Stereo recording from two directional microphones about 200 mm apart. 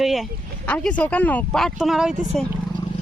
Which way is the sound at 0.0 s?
Centre (ahead or behind).